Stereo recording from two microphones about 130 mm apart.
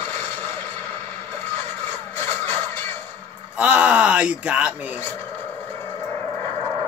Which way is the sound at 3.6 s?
10° right (ahead or behind).